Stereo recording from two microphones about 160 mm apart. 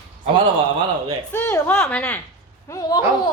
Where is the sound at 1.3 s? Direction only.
15° left (ahead or behind).